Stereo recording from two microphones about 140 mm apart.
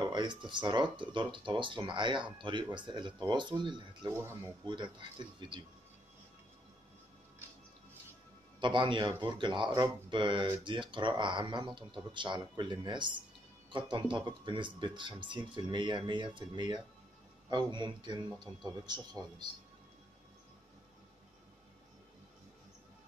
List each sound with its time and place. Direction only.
0.0 s speech: 30° right (ahead or behind)
4.1 s speech: 20° right (ahead or behind)
4.6 s speech: 35° right (ahead or behind)
8.5 s speech: 35° right (ahead or behind)